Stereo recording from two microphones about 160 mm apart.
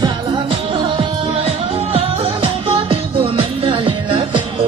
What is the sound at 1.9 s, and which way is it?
Music, 35° right (ahead or behind).